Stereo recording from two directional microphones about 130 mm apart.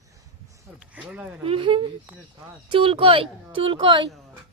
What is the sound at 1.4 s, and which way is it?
Speech, 40° right (ahead or behind).